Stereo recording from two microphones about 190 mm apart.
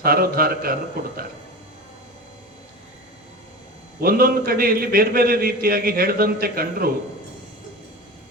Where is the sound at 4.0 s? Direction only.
50° right (ahead or behind).